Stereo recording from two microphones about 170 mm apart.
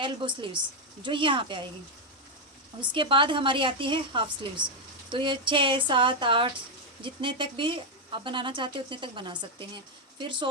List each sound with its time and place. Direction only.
0.0 s speech: 30° right (ahead or behind)
2.8 s speech: 30° right (ahead or behind)